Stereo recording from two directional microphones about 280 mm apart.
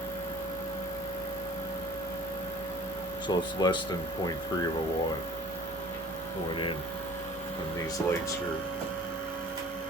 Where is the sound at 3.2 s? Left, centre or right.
Centre.